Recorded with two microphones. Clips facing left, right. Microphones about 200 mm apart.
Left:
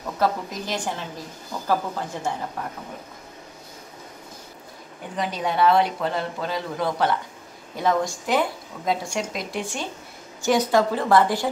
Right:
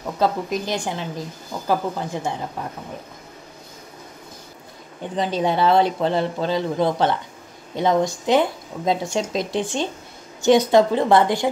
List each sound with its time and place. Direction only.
0.0 s a woman's voice: 15° right (ahead or behind)
5.1 s speech: 25° right (ahead or behind)